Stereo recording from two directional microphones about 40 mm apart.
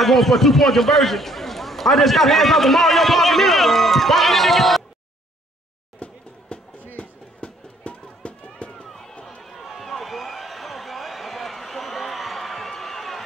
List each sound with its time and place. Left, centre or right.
0.0 s a man's voice: centre
6.0 s a sound: left
6.5 s music: left
7.0 s run: left
8.8 s run: centre
9.4 s a sound: centre